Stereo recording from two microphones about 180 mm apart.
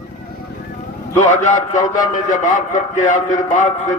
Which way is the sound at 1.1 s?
45° left (ahead or behind).